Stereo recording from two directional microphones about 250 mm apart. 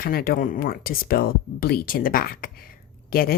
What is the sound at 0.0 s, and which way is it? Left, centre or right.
Speech, left.